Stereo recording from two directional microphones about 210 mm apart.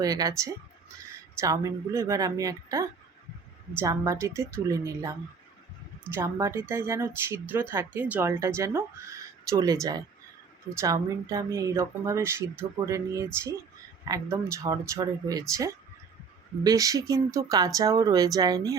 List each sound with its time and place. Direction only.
0.0 s speech: 15° right (ahead or behind)
6.1 s speech: 15° right (ahead or behind)